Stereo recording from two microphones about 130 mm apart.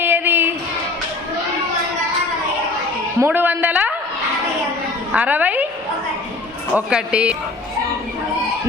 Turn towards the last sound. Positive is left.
turn(degrees=-10)  # may be behind; listen again after turning